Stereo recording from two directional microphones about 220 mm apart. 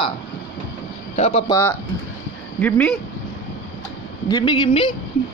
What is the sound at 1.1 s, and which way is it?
Speech, 30° left (ahead or behind).